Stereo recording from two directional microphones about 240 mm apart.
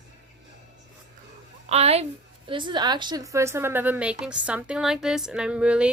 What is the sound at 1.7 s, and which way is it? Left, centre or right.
A woman's voice, right.